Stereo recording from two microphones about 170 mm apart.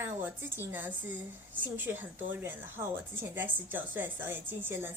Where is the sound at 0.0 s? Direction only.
10° right (ahead or behind).